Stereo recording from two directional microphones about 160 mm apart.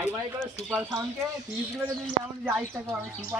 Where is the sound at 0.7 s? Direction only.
20° right (ahead or behind).